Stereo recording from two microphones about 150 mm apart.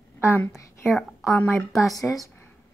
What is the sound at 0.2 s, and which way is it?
Speech, 15° left (ahead or behind).